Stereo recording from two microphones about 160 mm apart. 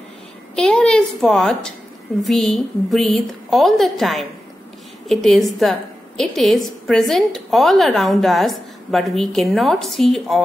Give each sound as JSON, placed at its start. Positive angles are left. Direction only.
{"t": 0.6, "sound": "a woman's voice", "side_deg": 5}